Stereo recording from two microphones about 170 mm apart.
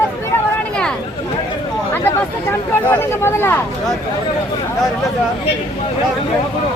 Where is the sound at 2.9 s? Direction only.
15° left (ahead or behind).